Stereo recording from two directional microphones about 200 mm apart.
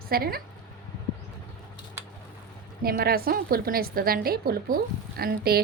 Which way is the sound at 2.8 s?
50° right (ahead or behind).